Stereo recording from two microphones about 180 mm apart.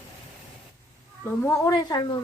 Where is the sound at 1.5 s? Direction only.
15° left (ahead or behind).